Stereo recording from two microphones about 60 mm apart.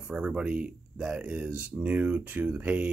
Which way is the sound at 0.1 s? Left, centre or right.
Centre.